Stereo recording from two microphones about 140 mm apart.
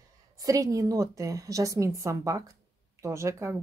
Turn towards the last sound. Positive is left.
turn(degrees=-20)  # may be behind; listen again after turning